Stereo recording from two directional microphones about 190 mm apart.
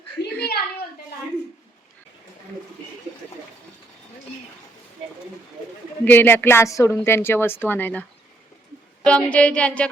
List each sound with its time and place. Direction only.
0.3 s a sound: 55° left (ahead or behind)
6.1 s a woman's voice: 10° left (ahead or behind)
9.0 s a woman's voice: 5° left (ahead or behind)